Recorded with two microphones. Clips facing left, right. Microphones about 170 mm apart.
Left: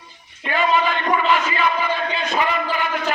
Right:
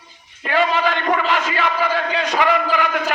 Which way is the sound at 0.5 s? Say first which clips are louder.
Right 1 dB; 75° right (ahead or behind).